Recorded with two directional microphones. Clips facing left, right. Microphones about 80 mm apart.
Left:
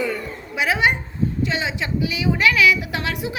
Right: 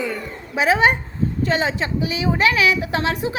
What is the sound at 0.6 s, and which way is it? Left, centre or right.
A woman's voice, right.